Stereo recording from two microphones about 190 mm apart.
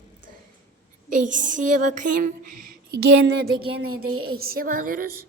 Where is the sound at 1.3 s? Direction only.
40° right (ahead or behind).